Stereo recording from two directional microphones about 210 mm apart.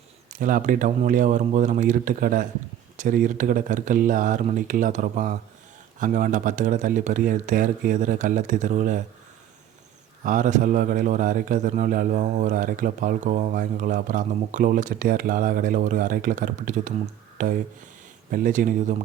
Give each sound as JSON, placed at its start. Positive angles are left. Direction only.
{"t": 0.3, "sound": "a man's voice", "side_deg": -40}
{"t": 10.2, "sound": "a man's voice", "side_deg": -40}